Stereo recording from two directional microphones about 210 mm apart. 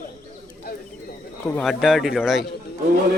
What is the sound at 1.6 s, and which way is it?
Speech, centre (ahead or behind).